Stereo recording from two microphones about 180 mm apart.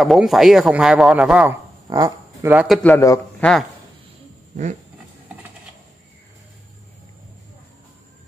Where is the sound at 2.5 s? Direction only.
10° right (ahead or behind).